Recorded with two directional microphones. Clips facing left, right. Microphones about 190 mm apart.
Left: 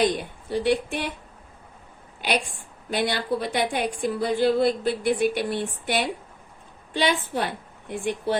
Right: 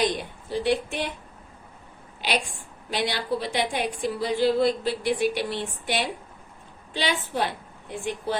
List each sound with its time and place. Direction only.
0.0 s a woman's voice: 50° left (ahead or behind)
2.2 s a woman's voice: 50° left (ahead or behind)